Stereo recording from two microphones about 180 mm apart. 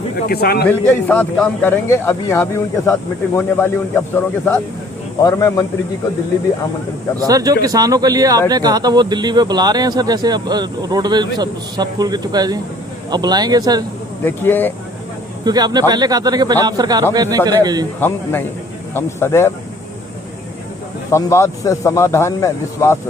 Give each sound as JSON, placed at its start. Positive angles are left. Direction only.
{"t": 0.3, "sound": "a man's voice", "side_deg": 60}
{"t": 0.7, "sound": "a man's voice", "side_deg": 10}
{"t": 5.2, "sound": "speech", "side_deg": 20}
{"t": 7.2, "sound": "speech", "side_deg": -20}
{"t": 14.3, "sound": "a man's voice", "side_deg": 10}
{"t": 15.4, "sound": "speech", "side_deg": -25}
{"t": 18.0, "sound": "a man's voice", "side_deg": 10}
{"t": 21.1, "sound": "a man's voice", "side_deg": 15}